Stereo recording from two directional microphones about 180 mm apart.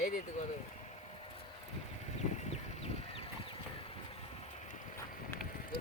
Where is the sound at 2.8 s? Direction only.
30° left (ahead or behind).